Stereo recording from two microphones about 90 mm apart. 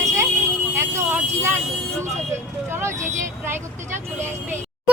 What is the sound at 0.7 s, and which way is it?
Vehicle, 25° right (ahead or behind).